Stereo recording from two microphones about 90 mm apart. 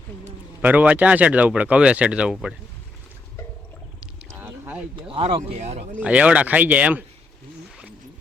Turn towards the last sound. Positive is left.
turn(degrees=-15)  # may be behind; listen again after turning